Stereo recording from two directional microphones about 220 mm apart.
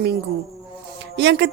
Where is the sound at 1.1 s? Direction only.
55° right (ahead or behind).